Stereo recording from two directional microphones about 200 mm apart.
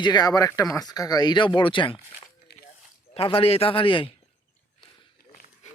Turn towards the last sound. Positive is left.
turn(degrees=25)  # may be behind; listen again after turning